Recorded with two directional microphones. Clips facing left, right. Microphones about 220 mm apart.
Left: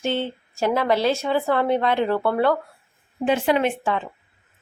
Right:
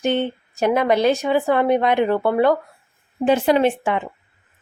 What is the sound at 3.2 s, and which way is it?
Speech, 40° right (ahead or behind).